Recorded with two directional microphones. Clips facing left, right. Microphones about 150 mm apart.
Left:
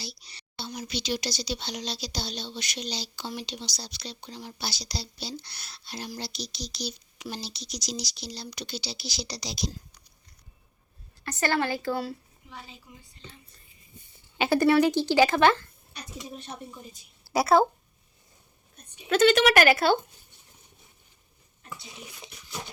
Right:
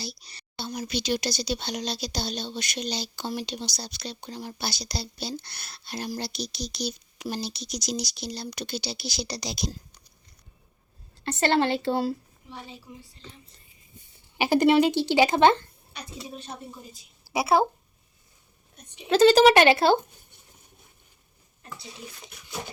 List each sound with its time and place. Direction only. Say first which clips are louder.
0.0 s speech: right 4 dB; 45° right (ahead or behind)
11.2 s a woman's voice: right 4 dB; 25° right (ahead or behind)
14.3 s speech: right 2 dB; 15° right (ahead or behind)
17.3 s a woman's voice: left 1 dB; centre (ahead or behind)
19.0 s speech: right 4 dB; 35° right (ahead or behind)